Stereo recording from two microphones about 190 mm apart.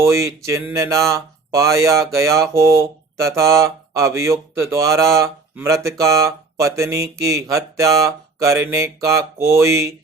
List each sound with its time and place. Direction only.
0.0 s speech: 15° right (ahead or behind)